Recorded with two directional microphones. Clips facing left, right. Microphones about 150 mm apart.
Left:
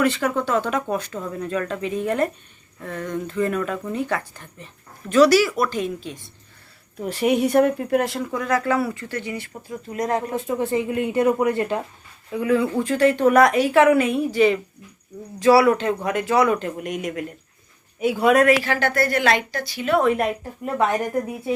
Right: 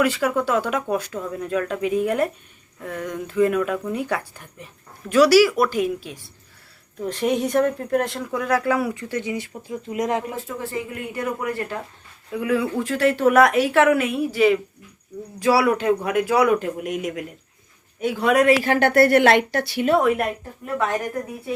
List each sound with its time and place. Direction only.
0.0 s speech: 5° right (ahead or behind)
7.0 s speech: 10° left (ahead or behind); by 10.3 s 15° right (ahead or behind)
10.3 s speech: 20° left (ahead or behind)
12.3 s a woman's voice: 5° right (ahead or behind)
18.0 s speech: 10° left (ahead or behind)
18.6 s a woman's voice: 55° right (ahead or behind)
20.0 s a woman's voice: 5° right (ahead or behind)